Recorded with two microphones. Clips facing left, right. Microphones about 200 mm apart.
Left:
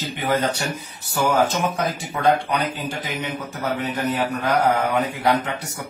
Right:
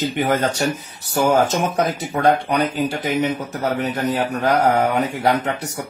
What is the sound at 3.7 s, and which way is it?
Speech, 45° right (ahead or behind).